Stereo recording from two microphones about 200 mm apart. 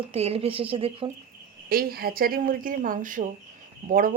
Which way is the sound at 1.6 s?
50° right (ahead or behind).